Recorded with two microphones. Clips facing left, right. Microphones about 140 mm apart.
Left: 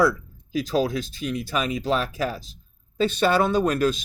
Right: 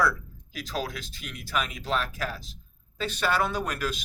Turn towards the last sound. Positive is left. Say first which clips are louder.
# left 9 dB
turn(degrees=25)  # may be behind; listen again after turning